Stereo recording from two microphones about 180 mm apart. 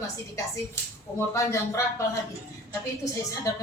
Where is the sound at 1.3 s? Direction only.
15° left (ahead or behind).